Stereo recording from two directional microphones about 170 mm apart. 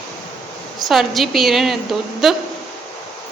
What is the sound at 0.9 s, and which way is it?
A woman's voice, centre (ahead or behind).